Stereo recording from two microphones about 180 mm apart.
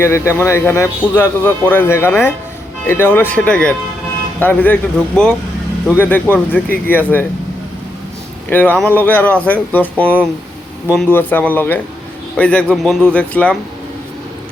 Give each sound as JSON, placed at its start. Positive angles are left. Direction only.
{"t": 0.0, "sound": "a man's voice", "side_deg": 15}
{"t": 8.4, "sound": "a man's voice", "side_deg": 10}